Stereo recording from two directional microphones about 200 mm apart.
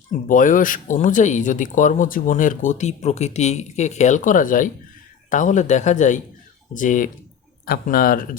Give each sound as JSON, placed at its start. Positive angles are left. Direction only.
{"t": 0.1, "sound": "speech", "side_deg": 40}